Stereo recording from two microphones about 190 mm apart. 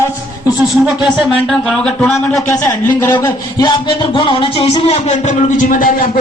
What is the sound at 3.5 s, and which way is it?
Music, 20° left (ahead or behind).